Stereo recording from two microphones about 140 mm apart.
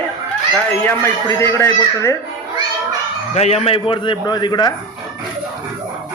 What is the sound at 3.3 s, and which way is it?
A man's voice, 50° left (ahead or behind).